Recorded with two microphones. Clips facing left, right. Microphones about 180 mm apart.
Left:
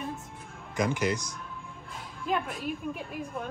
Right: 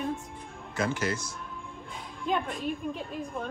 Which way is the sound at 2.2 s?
5° left (ahead or behind).